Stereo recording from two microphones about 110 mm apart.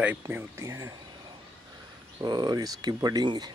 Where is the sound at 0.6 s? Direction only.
30° right (ahead or behind).